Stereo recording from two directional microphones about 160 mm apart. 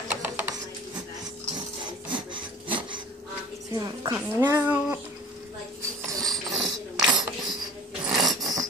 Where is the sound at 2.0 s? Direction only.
30° right (ahead or behind).